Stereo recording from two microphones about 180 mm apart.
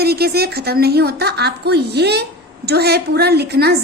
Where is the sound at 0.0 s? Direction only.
60° right (ahead or behind).